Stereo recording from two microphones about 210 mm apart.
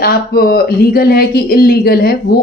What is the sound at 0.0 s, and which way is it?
Speech, 45° left (ahead or behind).